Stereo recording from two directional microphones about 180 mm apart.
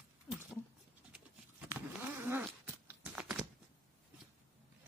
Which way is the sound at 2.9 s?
5° right (ahead or behind).